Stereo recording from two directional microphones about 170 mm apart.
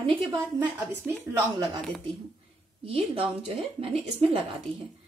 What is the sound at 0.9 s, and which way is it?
Speech, 15° right (ahead or behind).